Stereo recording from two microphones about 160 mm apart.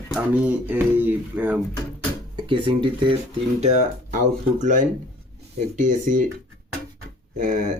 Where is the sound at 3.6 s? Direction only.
45° right (ahead or behind).